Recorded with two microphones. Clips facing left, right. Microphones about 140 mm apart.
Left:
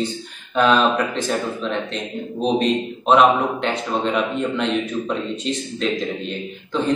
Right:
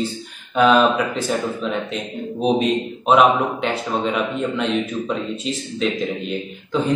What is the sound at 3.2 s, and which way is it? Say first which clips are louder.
A man's voice: even; 5° right (ahead or behind).